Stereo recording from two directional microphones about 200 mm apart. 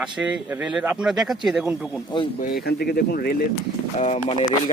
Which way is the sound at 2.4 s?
50° left (ahead or behind).